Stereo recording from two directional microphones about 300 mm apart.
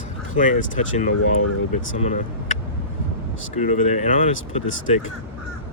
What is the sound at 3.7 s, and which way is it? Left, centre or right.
Speech, left.